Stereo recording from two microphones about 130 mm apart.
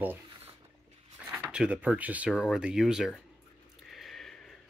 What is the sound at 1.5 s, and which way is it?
Speech, 10° right (ahead or behind).